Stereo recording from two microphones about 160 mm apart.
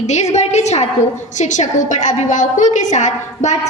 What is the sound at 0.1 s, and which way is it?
A woman's voice, 45° left (ahead or behind).